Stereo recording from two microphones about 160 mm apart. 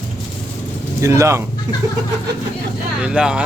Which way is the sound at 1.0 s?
20° right (ahead or behind).